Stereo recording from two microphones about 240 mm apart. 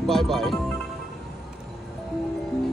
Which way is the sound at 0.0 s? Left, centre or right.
Centre.